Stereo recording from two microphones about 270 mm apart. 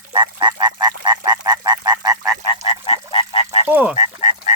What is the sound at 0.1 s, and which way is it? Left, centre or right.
Frog, centre.